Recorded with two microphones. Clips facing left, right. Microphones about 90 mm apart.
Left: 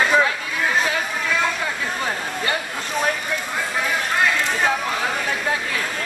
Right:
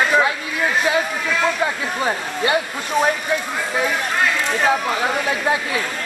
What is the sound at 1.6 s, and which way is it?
Speech, 20° right (ahead or behind).